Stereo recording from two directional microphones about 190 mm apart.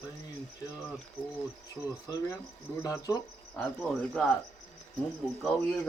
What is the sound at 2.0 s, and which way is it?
Cricket, 20° left (ahead or behind).